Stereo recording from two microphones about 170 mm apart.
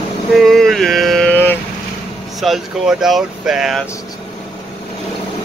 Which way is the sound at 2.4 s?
Centre (ahead or behind).